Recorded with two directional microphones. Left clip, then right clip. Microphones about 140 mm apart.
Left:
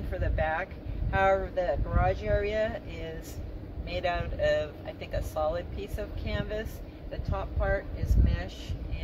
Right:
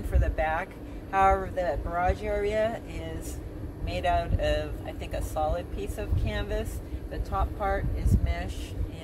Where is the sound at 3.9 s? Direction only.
20° left (ahead or behind).